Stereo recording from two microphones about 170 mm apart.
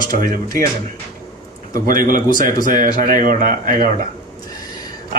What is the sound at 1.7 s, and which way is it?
Speech, 55° right (ahead or behind).